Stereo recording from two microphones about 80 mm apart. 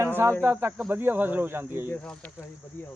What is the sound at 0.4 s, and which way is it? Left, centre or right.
Cricket, right.